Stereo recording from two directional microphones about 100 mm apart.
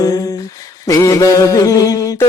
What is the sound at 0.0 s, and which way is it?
Humming, 35° left (ahead or behind).